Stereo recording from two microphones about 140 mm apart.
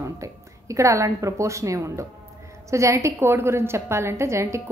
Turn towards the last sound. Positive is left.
turn(degrees=-20)  # may be behind; listen again after turning